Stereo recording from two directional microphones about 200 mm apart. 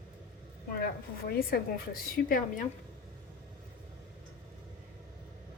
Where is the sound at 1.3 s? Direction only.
50° left (ahead or behind).